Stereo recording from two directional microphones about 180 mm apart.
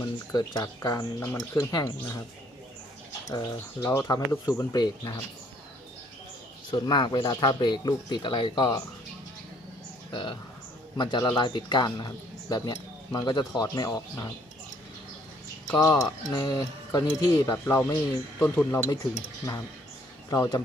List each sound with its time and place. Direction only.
0.0 s speech: 20° left (ahead or behind)
3.2 s speech: 20° left (ahead or behind)
6.7 s speech: 25° left (ahead or behind)
10.1 s speech: 25° left (ahead or behind)
15.6 s speech: 15° left (ahead or behind)
20.3 s speech: 20° left (ahead or behind)